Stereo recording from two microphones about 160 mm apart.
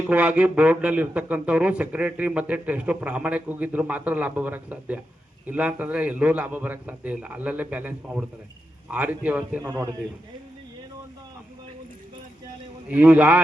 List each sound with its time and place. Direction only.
0.1 s speech: 10° right (ahead or behind)
9.6 s a man's voice: 20° right (ahead or behind)
12.9 s speech: 10° right (ahead or behind)